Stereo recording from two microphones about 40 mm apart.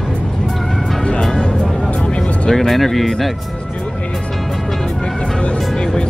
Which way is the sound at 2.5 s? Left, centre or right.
Centre.